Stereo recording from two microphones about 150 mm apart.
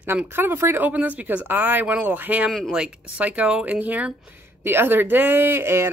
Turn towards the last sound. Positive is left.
turn(degrees=-15)  # may be behind; listen again after turning